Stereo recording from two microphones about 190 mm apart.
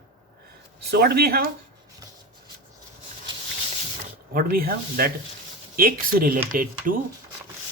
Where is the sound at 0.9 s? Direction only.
55° right (ahead or behind).